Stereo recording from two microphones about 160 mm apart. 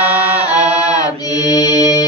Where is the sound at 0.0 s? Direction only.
40° right (ahead or behind).